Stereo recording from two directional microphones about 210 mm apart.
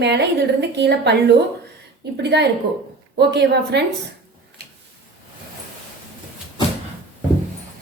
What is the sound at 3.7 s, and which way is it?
Speech, 55° right (ahead or behind).